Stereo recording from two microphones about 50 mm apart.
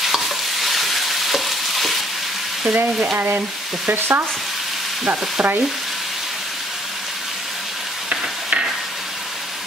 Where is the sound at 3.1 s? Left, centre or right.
Right.